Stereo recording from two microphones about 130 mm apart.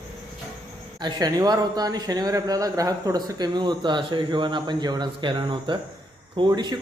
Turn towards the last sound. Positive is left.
turn(degrees=-30)  # may be behind; listen again after turning